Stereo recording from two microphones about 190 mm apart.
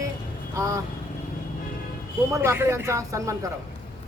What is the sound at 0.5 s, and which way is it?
Speech, 15° right (ahead or behind).